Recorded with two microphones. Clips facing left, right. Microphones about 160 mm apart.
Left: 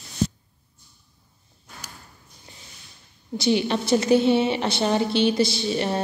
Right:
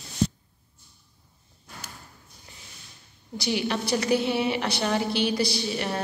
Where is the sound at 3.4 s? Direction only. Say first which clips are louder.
Left 5 dB; 25° left (ahead or behind).